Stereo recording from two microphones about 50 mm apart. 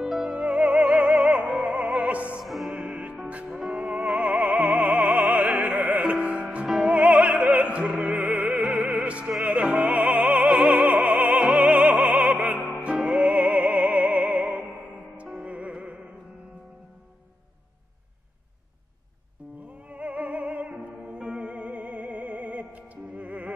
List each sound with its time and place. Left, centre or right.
0.0 s music: centre
1.2 s opera: right
2.4 s music: centre
2.7 s music: right
3.4 s music: centre
3.7 s music: right
6.0 s music: right
7.4 s opera: right
8.2 s music: right
8.5 s music: right
10.4 s opera: centre
10.7 s opera: right
12.8 s music: right
19.9 s music: right